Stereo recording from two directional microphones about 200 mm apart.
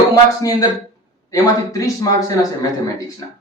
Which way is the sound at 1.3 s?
15° left (ahead or behind).